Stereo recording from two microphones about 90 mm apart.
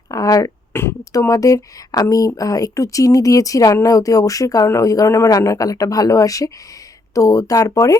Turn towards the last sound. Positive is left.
turn(degrees=40)  # may be behind; listen again after turning